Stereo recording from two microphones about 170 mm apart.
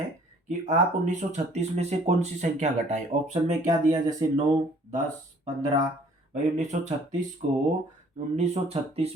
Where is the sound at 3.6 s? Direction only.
20° right (ahead or behind).